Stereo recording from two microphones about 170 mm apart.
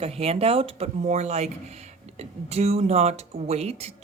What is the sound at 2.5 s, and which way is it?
Speech, 35° right (ahead or behind).